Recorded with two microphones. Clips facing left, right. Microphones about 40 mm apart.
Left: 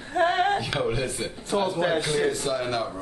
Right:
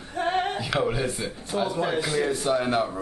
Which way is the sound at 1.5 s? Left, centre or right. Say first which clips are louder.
Left 2 dB; left.